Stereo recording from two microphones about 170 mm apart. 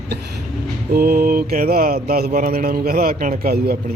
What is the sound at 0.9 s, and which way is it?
Mantra, 65° right (ahead or behind).